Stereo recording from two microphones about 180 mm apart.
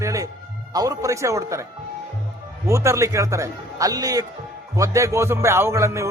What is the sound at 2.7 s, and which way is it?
Speech, 15° right (ahead or behind).